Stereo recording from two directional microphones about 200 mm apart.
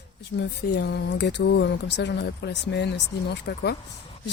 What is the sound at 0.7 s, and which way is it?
Speech, 55° left (ahead or behind).